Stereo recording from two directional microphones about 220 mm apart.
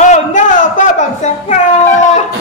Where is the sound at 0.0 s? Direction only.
35° left (ahead or behind).